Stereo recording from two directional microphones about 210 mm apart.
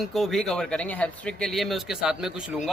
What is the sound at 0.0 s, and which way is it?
Speech, centre (ahead or behind).